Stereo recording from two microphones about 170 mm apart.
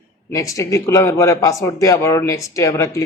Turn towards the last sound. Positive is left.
turn(degrees=20)  # may be behind; listen again after turning